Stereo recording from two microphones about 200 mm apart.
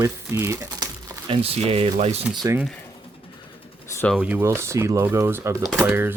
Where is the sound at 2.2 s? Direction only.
Centre (ahead or behind).